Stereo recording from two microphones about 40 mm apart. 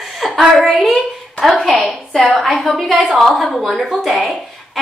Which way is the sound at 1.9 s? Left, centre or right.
Left.